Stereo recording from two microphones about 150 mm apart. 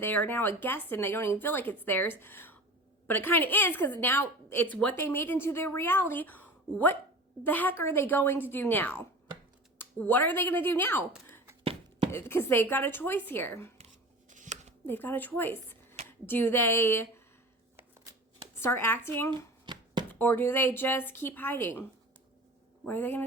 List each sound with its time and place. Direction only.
0.0 s a woman's voice: 15° left (ahead or behind)
11.6 s chopping: 40° right (ahead or behind)
12.1 s a woman's voice: 15° left (ahead or behind)
13.7 s a sound: 50° right (ahead or behind)
14.8 s a woman's voice: 15° left (ahead or behind)
18.6 s a woman's voice: 15° left (ahead or behind)
19.6 s chopping: 30° right (ahead or behind)
20.1 s a woman's voice: 15° left (ahead or behind)
22.9 s a woman's voice: 15° left (ahead or behind)